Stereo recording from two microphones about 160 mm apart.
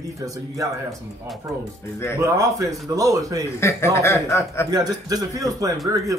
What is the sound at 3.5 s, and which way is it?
A man's voice, 15° left (ahead or behind).